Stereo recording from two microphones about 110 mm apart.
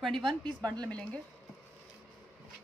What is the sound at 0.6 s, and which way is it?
Speech, 35° right (ahead or behind).